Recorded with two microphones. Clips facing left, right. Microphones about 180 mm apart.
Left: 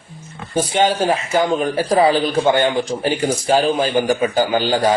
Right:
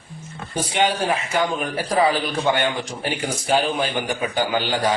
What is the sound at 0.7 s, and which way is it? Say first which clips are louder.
A man's voice: left 4 dB; 40° left (ahead or behind).